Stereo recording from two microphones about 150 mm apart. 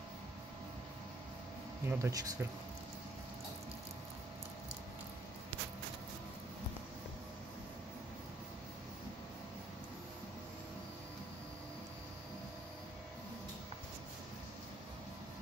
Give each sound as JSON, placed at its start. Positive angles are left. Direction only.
{"t": 1.9, "sound": "speech", "side_deg": -20}